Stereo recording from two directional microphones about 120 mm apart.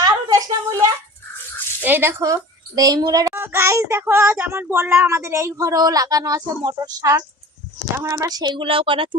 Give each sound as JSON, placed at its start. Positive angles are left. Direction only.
{"t": 0.0, "sound": "a sound", "side_deg": -30}
{"t": 1.8, "sound": "speech", "side_deg": -15}
{"t": 3.4, "sound": "child singing", "side_deg": -20}
{"t": 7.9, "sound": "speech", "side_deg": -25}